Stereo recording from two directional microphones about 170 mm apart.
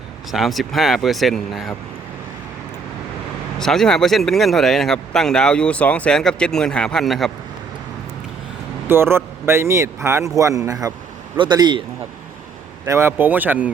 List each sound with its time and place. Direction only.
0.3 s speech: centre (ahead or behind)
3.6 s speech: centre (ahead or behind)
8.9 s a man's voice: 15° right (ahead or behind)
12.9 s a man's voice: 15° right (ahead or behind)